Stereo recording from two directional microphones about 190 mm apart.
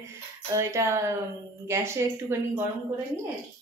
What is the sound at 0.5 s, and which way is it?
A woman's voice, 15° right (ahead or behind).